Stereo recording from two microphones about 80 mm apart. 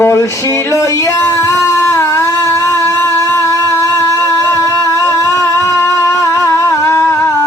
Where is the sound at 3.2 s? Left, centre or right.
Left.